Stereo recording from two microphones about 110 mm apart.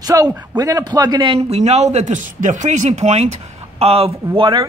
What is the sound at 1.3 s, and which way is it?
Speech, 75° right (ahead or behind).